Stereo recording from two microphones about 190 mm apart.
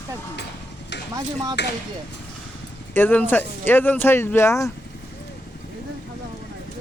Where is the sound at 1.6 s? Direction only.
65° left (ahead or behind).